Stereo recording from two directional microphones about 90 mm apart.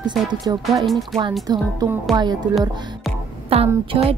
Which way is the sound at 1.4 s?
45° right (ahead or behind).